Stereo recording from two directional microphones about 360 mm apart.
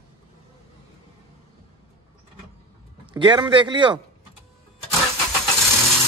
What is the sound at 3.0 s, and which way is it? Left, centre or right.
A man's voice, centre.